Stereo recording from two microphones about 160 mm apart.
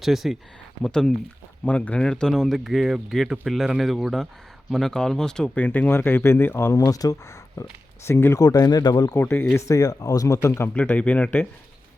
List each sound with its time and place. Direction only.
0.0 s speech: centre (ahead or behind)